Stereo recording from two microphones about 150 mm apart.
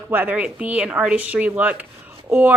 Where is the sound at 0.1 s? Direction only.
10° right (ahead or behind).